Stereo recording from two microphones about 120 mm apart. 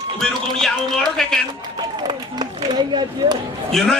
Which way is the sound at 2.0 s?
35° right (ahead or behind).